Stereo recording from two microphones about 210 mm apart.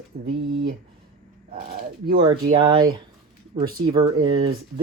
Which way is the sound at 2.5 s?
20° right (ahead or behind).